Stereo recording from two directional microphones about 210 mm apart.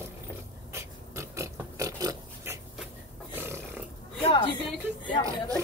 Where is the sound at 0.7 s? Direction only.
15° right (ahead or behind).